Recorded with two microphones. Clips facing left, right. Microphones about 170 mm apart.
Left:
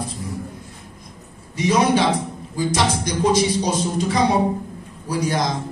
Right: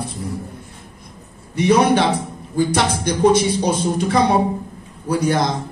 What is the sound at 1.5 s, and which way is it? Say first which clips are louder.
A man's voice: right 3 dB; 60° right (ahead or behind).